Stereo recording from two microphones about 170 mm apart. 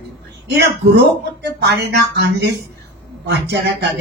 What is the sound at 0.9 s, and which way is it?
Speech, 90° right.